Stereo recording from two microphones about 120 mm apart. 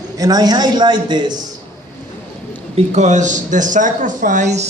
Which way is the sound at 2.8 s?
75° right (ahead or behind).